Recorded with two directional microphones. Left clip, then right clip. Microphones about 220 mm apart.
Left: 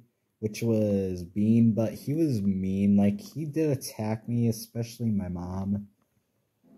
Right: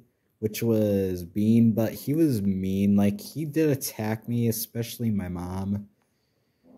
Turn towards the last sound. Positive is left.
turn(degrees=-35)  # may be behind; listen again after turning